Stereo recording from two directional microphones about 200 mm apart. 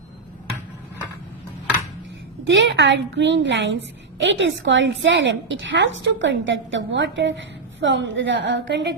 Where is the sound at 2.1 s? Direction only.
65° right (ahead or behind).